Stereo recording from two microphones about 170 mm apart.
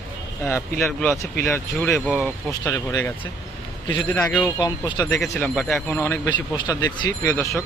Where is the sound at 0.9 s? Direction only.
5° left (ahead or behind).